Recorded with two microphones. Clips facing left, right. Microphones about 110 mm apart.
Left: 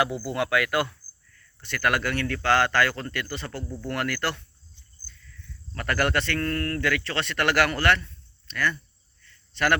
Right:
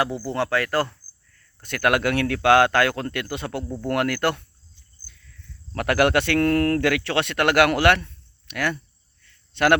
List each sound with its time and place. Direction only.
0.0 s speech: 30° right (ahead or behind)
1.6 s speech: 55° right (ahead or behind)
5.7 s speech: 65° right (ahead or behind)
7.7 s speech: 65° right (ahead or behind)